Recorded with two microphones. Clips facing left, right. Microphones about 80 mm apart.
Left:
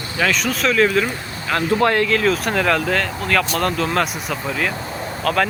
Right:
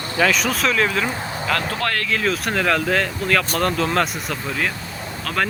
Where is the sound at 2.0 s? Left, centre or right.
Centre.